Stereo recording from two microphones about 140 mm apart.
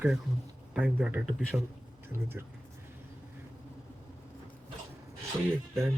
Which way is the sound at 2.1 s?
20° right (ahead or behind).